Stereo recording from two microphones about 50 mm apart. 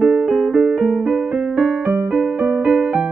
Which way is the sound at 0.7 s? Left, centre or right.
Right.